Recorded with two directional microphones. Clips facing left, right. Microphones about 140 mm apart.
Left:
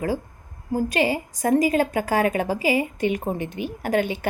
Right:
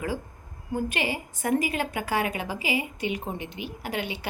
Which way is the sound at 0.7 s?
35° left (ahead or behind).